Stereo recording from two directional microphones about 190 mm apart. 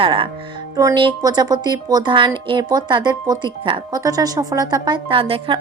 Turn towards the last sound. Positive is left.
turn(degrees=-30)  # may be behind; listen again after turning